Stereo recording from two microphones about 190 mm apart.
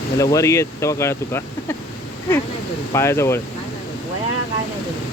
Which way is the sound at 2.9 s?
15° left (ahead or behind).